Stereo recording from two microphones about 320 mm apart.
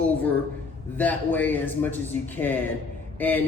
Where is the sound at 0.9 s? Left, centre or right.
Centre.